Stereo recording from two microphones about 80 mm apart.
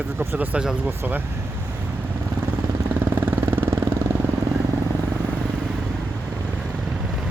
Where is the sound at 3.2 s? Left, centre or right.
Right.